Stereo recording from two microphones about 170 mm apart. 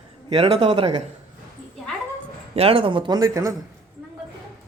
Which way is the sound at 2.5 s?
35° right (ahead or behind).